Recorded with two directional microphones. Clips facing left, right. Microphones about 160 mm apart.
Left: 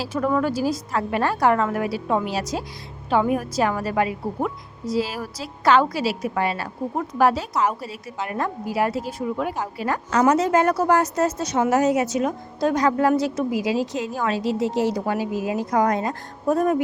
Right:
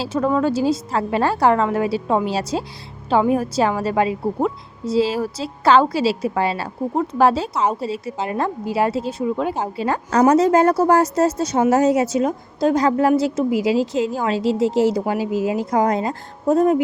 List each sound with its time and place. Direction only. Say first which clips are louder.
0.0 s a woman's voice: right 3 dB; 25° right (ahead or behind)